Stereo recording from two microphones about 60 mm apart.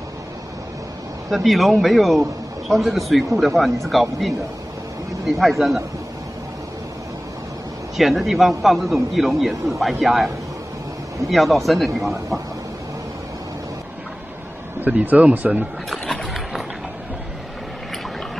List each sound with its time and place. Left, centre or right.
1.3 s a man's voice: centre
8.0 s a man's voice: centre
14.8 s speech: right
15.9 s a sound: centre